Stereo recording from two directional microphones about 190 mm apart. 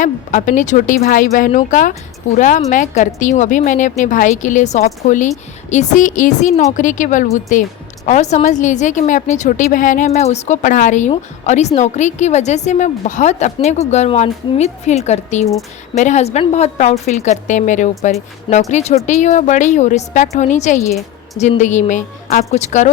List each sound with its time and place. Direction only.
0.0 s a woman's voice: 40° left (ahead or behind)